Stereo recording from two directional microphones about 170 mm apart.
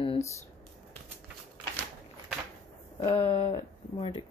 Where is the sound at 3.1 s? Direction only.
35° left (ahead or behind).